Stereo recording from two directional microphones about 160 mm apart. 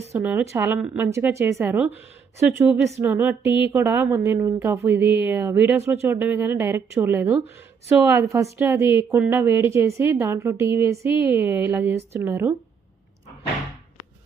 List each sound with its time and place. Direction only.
0.1 s a woman's voice: 10° right (ahead or behind)